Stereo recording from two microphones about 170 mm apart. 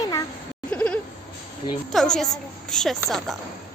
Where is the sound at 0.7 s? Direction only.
5° left (ahead or behind).